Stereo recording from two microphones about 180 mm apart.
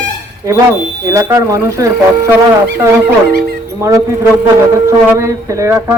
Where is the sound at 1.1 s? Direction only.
20° right (ahead or behind).